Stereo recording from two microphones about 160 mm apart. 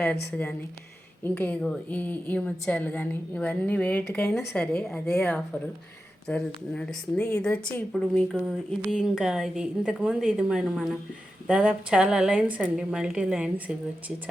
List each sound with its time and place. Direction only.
1.2 s a woman's voice: 10° left (ahead or behind)
7.2 s a woman's voice: 15° left (ahead or behind)
7.4 s a woman's voice: 5° left (ahead or behind)